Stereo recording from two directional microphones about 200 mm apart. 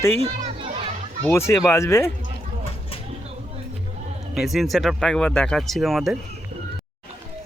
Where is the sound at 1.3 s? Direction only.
15° left (ahead or behind).